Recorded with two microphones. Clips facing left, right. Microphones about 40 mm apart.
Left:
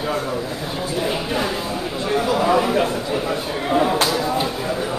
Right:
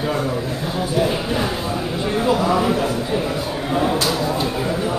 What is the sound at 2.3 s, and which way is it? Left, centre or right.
Speech, centre.